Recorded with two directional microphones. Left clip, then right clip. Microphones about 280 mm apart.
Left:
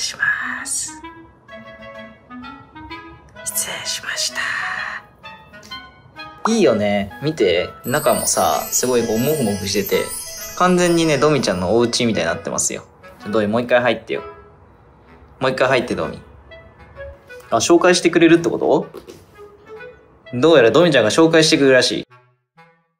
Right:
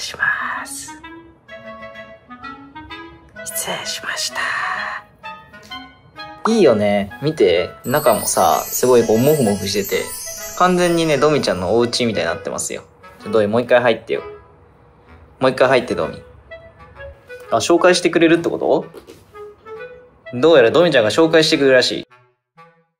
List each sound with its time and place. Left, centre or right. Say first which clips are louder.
0.0 s whispering: even; centre
2.2 s clarinet: right 2 dB; centre
3.4 s speech: right 1 dB; centre
15.3 s speech: right 3 dB; centre
20.2 s speech: right 1 dB; centre